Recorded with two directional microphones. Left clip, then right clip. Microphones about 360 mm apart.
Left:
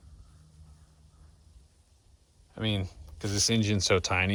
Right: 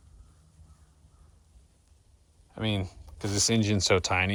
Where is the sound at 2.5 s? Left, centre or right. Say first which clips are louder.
Right 1 dB; centre.